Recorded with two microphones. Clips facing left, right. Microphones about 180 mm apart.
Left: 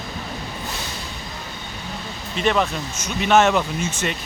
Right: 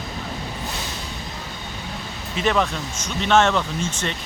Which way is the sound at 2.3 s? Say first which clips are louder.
Left 1 dB; centre (ahead or behind).